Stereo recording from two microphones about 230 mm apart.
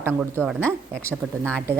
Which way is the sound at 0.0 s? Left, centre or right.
Centre.